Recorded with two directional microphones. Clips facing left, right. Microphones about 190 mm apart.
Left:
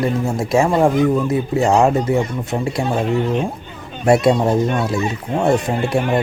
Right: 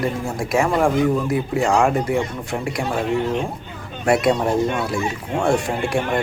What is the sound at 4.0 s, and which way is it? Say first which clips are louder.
A man's voice: left 4 dB; 25° left (ahead or behind).